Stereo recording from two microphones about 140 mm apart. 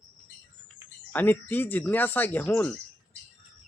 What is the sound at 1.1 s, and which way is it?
Speech, 15° left (ahead or behind).